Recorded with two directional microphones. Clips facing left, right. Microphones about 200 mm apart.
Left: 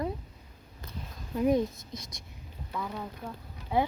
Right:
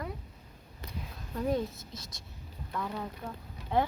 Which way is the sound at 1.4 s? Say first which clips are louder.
Left 5 dB; 15° left (ahead or behind).